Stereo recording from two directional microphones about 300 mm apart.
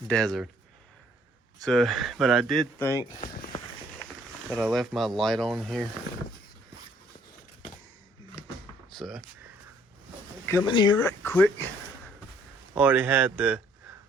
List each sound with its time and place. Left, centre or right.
0.1 s speech: centre
1.6 s speech: centre
3.2 s speech: left
4.4 s speech: centre
8.9 s speech: centre
10.4 s speech: centre
12.7 s speech: centre